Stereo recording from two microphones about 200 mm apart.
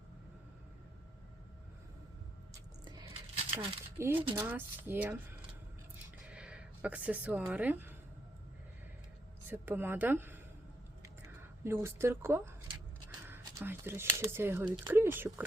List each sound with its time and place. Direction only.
2.8 s coin: 20° right (ahead or behind)
3.9 s speech: 10° right (ahead or behind)
6.2 s a sound: 5° right (ahead or behind)
9.5 s speech: 10° right (ahead or behind)
11.6 s speech: 15° right (ahead or behind)